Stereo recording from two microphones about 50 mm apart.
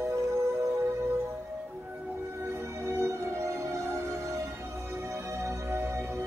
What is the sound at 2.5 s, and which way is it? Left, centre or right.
Music, right.